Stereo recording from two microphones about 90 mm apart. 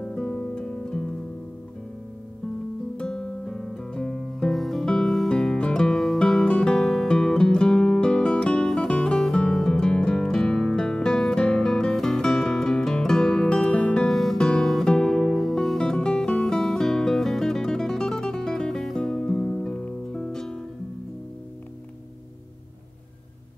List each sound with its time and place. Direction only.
0.0 s music: 10° left (ahead or behind)
3.0 s guitar: 10° left (ahead or behind)
14.0 s music: 5° left (ahead or behind)